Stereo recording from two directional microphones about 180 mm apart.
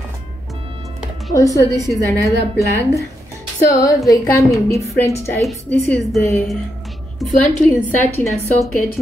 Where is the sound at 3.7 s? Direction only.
20° left (ahead or behind).